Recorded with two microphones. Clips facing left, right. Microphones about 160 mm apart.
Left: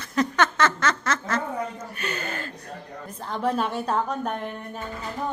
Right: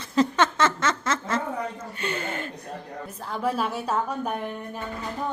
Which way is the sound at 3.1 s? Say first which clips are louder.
Left 2 dB; 5° right (ahead or behind).